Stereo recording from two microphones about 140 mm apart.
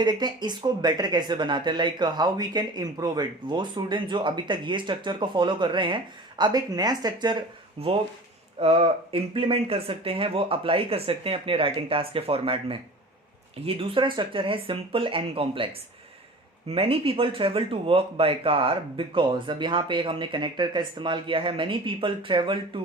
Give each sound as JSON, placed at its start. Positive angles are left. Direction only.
{"t": 0.0, "sound": "speech", "side_deg": -30}